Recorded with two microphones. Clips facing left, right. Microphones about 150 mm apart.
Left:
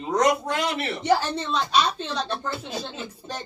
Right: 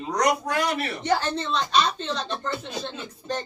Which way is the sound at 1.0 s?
10° left (ahead or behind).